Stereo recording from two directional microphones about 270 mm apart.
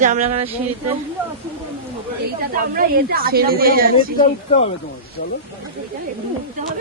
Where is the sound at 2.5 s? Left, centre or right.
Right.